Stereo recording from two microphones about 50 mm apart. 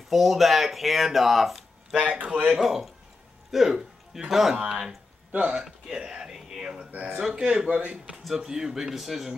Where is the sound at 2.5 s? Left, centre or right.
Centre.